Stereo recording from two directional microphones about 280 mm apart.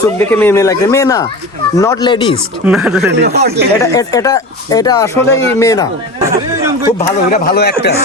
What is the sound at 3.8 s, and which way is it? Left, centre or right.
Speech, centre.